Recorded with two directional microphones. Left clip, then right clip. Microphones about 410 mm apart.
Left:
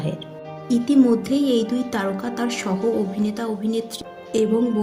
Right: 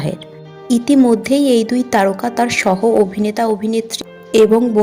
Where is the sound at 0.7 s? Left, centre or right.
Centre.